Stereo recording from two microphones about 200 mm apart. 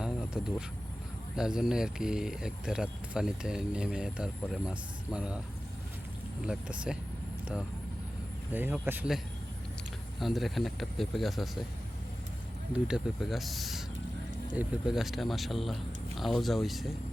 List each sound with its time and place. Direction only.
0.0 s a sound: 5° right (ahead or behind)
1.4 s speech: 5° right (ahead or behind)
6.4 s speech: 5° right (ahead or behind)
8.5 s speech: 10° right (ahead or behind)
12.7 s speech: centre (ahead or behind)